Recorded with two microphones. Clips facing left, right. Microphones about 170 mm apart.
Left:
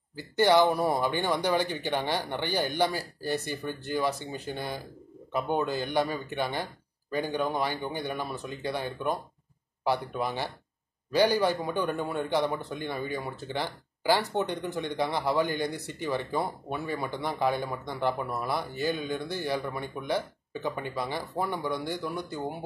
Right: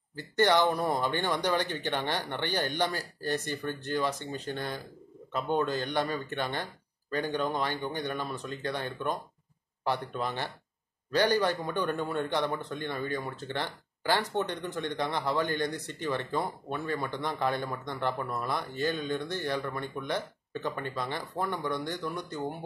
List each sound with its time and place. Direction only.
0.2 s speech: 5° left (ahead or behind)